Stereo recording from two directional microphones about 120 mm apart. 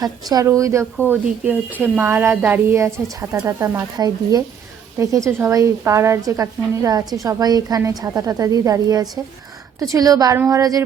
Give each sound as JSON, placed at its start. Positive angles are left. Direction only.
{"t": 0.0, "sound": "a woman's voice", "side_deg": -35}
{"t": 1.0, "sound": "a woman's voice", "side_deg": -15}